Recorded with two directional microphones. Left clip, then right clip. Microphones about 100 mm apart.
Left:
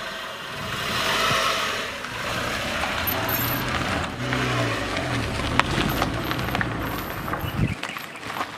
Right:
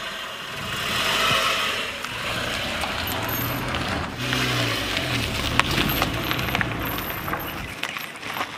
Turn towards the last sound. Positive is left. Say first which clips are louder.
# right 1 dB
turn(degrees=0)  # may be behind; listen again after turning